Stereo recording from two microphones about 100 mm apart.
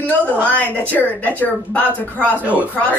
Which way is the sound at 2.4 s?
15° right (ahead or behind).